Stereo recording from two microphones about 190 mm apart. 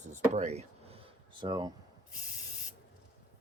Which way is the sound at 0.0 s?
40° right (ahead or behind).